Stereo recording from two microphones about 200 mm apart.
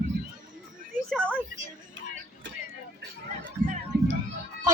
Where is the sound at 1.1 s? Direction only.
5° left (ahead or behind).